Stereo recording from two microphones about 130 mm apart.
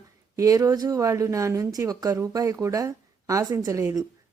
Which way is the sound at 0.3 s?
25° right (ahead or behind).